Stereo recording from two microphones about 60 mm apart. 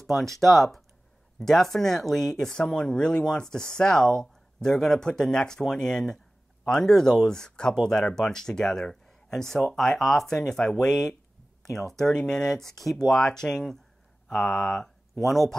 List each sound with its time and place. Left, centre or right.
0.0 s speech: centre
15.1 s speech: centre